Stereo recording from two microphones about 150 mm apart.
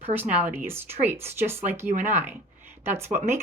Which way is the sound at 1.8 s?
50° right (ahead or behind).